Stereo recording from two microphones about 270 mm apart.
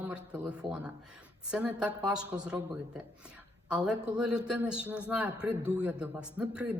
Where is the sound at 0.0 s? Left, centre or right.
Centre.